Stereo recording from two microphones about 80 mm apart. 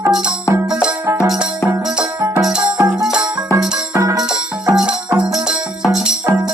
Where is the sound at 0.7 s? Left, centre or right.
Centre.